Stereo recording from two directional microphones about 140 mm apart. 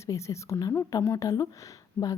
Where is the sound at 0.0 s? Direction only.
20° left (ahead or behind).